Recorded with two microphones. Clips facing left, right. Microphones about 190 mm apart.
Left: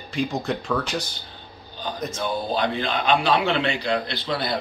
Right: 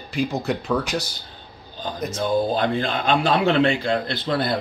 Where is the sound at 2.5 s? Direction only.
45° right (ahead or behind).